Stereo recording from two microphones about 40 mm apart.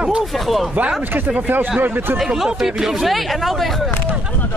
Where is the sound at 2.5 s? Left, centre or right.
Centre.